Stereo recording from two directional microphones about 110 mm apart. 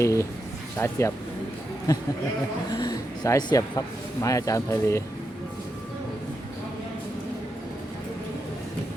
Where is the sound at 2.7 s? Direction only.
40° left (ahead or behind).